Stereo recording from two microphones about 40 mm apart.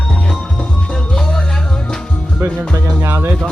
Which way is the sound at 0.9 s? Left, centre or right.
Centre.